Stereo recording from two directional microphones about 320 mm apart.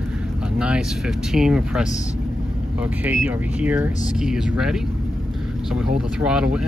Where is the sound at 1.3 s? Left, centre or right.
Centre.